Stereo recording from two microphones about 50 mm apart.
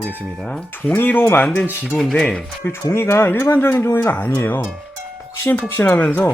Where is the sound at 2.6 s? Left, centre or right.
Left.